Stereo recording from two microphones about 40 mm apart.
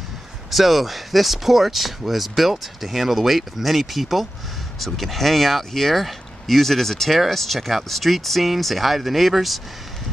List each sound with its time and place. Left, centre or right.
0.5 s speech: centre